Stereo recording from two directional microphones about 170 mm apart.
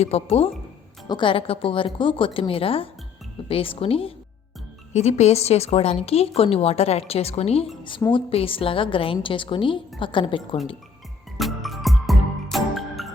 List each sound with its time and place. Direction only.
0.0 s speech: 35° left (ahead or behind)
11.3 s music: centre (ahead or behind)